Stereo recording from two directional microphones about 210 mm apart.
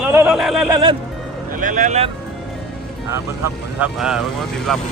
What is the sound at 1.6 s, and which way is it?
Speech, 35° right (ahead or behind).